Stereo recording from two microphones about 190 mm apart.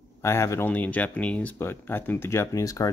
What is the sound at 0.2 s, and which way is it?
Speech, 15° left (ahead or behind).